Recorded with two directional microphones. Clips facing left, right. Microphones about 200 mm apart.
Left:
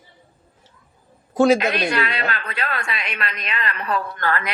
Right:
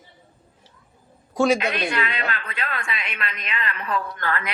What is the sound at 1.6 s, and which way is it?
A woman's voice, 70° left (ahead or behind).